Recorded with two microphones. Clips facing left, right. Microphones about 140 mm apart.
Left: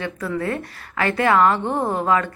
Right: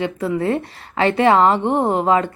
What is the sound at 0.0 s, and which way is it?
A woman's voice, 25° right (ahead or behind).